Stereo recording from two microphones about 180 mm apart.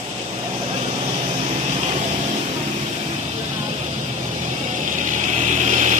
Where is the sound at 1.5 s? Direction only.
35° right (ahead or behind).